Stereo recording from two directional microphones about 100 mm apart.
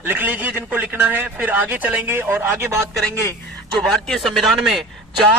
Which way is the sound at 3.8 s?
5° left (ahead or behind).